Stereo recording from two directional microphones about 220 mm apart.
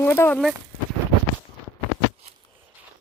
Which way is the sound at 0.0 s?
10° left (ahead or behind).